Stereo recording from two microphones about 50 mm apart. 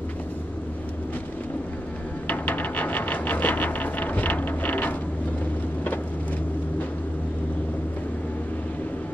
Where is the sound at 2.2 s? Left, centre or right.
Left.